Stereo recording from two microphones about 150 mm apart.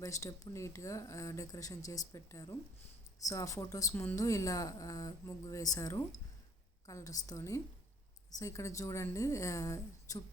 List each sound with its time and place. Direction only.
0.0 s speech: 20° left (ahead or behind)